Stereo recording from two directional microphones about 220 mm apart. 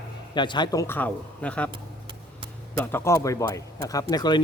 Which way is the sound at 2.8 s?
10° left (ahead or behind).